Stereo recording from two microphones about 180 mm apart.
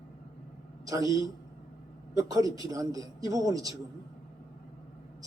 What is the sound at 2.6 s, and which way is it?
Speech, 20° right (ahead or behind).